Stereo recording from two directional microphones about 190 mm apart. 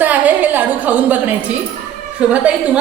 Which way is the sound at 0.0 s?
10° right (ahead or behind).